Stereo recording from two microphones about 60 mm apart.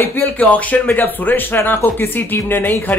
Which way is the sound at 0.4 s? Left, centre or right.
Left.